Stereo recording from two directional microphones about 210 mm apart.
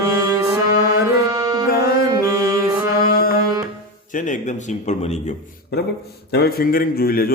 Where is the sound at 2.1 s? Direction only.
15° right (ahead or behind).